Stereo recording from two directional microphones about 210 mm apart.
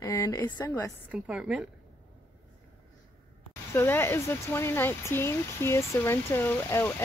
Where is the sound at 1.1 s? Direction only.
5° right (ahead or behind).